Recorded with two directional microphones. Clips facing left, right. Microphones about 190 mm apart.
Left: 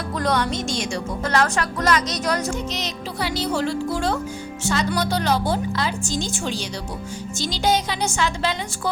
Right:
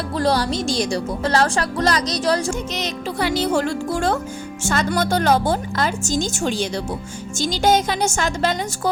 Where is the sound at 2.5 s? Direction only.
50° right (ahead or behind).